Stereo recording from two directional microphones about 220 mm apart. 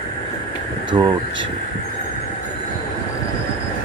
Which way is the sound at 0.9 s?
20° right (ahead or behind).